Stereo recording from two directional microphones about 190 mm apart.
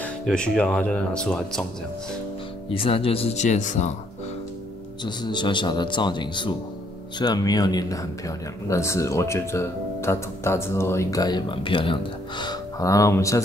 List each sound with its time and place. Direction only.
0.0 s speech: 5° left (ahead or behind)
2.7 s speech: 30° left (ahead or behind)
5.0 s a man's voice: 25° left (ahead or behind)